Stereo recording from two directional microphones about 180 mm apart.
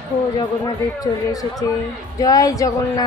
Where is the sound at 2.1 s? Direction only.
20° left (ahead or behind).